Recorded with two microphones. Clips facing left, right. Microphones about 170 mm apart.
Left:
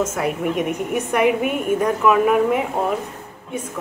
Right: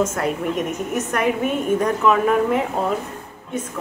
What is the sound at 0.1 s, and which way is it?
A woman's voice, 10° left (ahead or behind).